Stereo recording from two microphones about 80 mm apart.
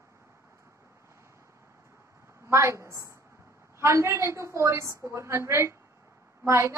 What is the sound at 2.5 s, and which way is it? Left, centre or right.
A woman's voice, right.